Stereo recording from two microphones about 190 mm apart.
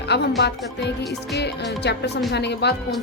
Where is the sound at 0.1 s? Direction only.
60° left (ahead or behind).